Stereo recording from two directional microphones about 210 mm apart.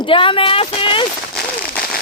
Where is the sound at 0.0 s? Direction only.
25° left (ahead or behind).